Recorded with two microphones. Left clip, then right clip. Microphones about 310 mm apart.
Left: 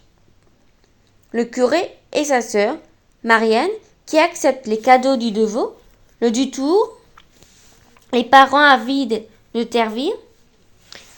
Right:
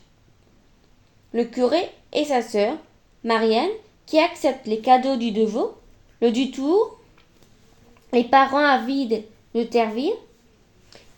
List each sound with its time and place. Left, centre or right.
1.3 s a woman's voice: left
7.9 s a woman's voice: left
10.9 s a sound: left